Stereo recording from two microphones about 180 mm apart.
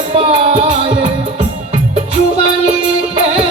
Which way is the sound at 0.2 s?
40° right (ahead or behind).